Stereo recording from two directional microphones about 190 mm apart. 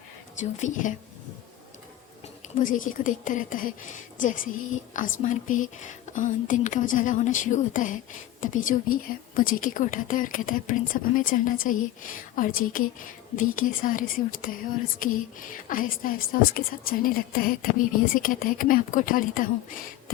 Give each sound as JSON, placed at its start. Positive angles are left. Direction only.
{"t": 0.3, "sound": "speech", "side_deg": 40}
{"t": 2.6, "sound": "a woman's voice", "side_deg": 45}